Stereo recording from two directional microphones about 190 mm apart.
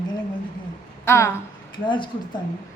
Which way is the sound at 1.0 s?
15° left (ahead or behind).